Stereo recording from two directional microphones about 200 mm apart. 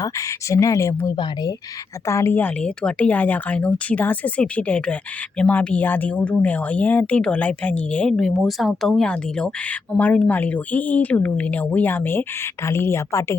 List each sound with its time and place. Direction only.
0.0 s speech: 15° left (ahead or behind)